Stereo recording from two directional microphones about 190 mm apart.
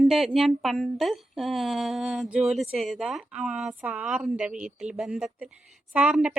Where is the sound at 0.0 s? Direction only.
Centre (ahead or behind).